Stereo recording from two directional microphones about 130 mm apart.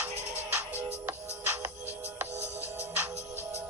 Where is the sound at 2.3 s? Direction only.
60° right (ahead or behind).